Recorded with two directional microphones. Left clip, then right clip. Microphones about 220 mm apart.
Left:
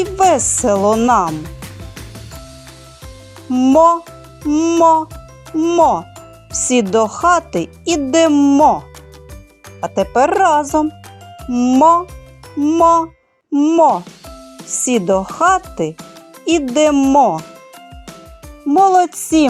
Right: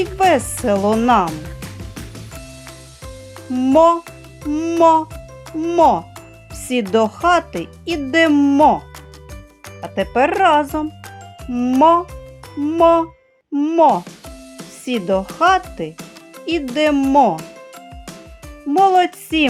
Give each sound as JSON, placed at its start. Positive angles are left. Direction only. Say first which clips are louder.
{"t": 0.0, "sound": "speech", "louder": "left 2 dB", "side_deg": 30}
{"t": 3.5, "sound": "speech", "louder": "left 2 dB", "side_deg": 25}
{"t": 9.8, "sound": "speech", "louder": "left 3 dB", "side_deg": 30}
{"t": 18.7, "sound": "speech", "louder": "left 2 dB", "side_deg": 25}